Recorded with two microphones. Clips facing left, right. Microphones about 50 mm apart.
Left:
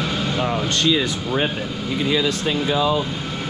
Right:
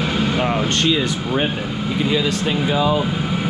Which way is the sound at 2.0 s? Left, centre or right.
Right.